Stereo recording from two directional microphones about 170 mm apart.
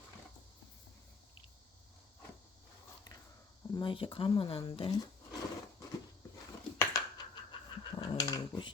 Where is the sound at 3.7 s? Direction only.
30° left (ahead or behind).